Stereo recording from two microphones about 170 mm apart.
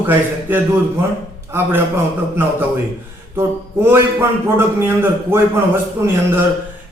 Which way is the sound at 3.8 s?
15° right (ahead or behind).